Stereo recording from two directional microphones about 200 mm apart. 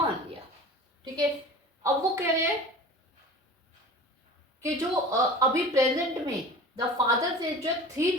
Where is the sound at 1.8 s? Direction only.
15° right (ahead or behind).